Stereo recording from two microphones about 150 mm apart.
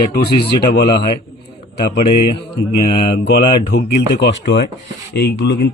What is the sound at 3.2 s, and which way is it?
Mantra, 90° left.